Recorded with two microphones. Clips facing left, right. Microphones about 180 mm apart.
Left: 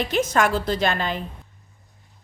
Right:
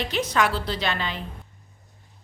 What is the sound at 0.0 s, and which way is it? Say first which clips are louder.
A woman's voice: left 3 dB; 45° left (ahead or behind).